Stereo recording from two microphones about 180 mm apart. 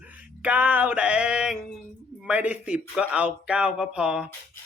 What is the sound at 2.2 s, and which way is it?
Speech, 10° right (ahead or behind).